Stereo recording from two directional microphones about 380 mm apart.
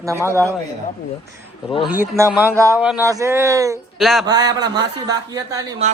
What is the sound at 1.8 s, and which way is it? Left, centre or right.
Speech, centre.